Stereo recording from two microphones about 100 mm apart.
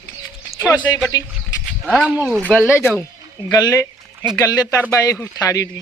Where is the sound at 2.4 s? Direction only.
20° left (ahead or behind).